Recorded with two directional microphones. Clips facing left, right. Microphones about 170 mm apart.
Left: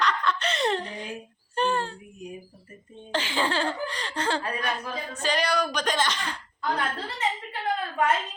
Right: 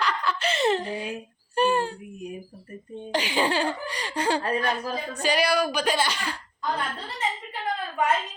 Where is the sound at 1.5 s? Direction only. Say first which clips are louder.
Right 3 dB; 10° right (ahead or behind).